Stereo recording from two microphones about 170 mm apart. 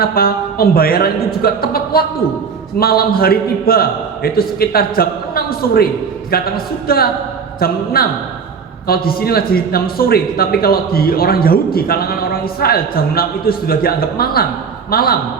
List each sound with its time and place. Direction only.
0.0 s a man's voice: 60° left (ahead or behind)